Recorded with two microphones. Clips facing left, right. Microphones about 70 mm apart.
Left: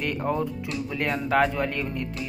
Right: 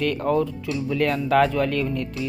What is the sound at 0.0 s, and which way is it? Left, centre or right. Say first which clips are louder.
Speech: right 5 dB; centre.